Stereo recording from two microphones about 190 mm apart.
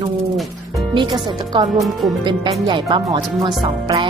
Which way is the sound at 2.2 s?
25° right (ahead or behind).